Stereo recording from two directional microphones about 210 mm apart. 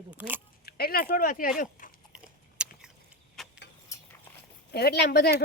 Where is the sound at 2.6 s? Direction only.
5° right (ahead or behind).